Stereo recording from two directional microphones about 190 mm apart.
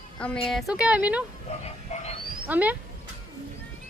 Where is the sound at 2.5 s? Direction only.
10° right (ahead or behind).